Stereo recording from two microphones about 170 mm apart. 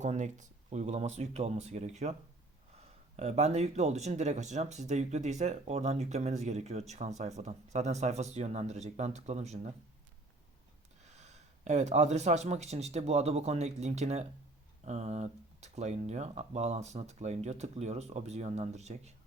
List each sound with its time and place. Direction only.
0.0 s speech: 45° right (ahead or behind)
11.0 s speech: 40° right (ahead or behind)